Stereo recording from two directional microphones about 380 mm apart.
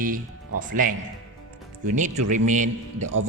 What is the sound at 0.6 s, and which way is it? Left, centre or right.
Speech, right.